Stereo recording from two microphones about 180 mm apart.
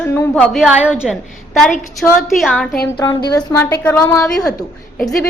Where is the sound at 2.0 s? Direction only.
Centre (ahead or behind).